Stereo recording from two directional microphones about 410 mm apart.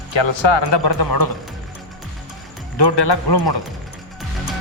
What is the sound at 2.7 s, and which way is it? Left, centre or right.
Speech, left.